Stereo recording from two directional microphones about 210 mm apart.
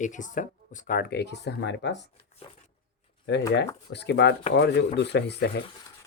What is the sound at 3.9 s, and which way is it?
Speech, 55° left (ahead or behind).